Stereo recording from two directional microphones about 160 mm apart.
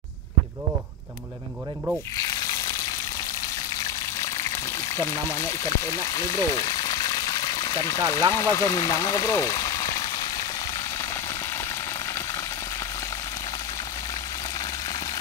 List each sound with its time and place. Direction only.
4.9 s speech: 15° left (ahead or behind)